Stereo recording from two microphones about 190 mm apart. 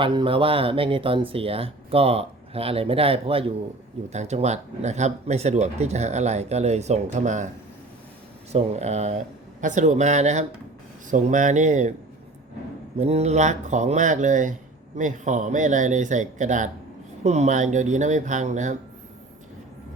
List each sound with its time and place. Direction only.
0.0 s speech: 25° right (ahead or behind)
8.5 s speech: 35° right (ahead or behind)
13.0 s speech: 35° right (ahead or behind)